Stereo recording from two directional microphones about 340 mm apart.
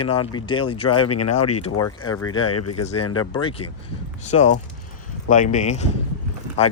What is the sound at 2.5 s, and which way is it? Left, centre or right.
Speech, left.